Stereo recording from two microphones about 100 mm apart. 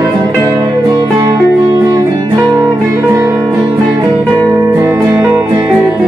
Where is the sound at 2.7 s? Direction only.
30° right (ahead or behind).